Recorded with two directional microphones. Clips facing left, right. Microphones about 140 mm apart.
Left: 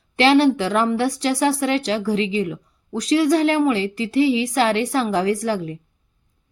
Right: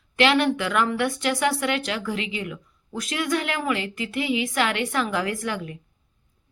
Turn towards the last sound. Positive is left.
turn(degrees=35)  # may be behind; listen again after turning